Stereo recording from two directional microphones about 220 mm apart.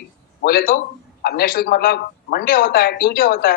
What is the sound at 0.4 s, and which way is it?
Speech, 40° left (ahead or behind).